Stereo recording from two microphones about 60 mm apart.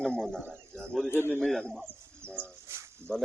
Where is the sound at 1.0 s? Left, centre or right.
Left.